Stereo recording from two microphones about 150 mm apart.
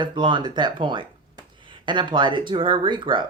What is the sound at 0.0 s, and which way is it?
Speech, 30° right (ahead or behind).